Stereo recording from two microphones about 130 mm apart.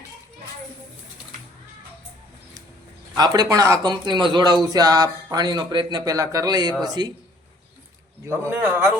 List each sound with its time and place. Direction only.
3.2 s speech: 30° right (ahead or behind)
8.2 s a man's voice: 20° right (ahead or behind)